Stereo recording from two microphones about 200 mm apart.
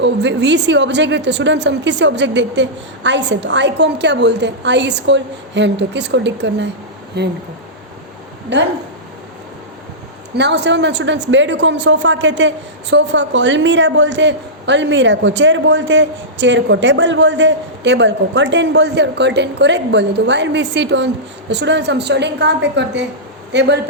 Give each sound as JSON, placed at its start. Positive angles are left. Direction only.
{"t": 0.0, "sound": "speech", "side_deg": -60}
{"t": 8.5, "sound": "speech", "side_deg": -60}
{"t": 10.3, "sound": "speech", "side_deg": -60}